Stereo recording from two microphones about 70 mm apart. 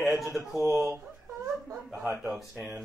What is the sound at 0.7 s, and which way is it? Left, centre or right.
Speech, right.